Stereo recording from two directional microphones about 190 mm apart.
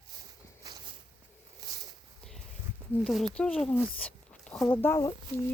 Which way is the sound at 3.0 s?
Centre (ahead or behind).